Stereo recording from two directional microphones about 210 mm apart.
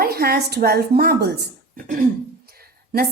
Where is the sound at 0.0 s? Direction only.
45° right (ahead or behind).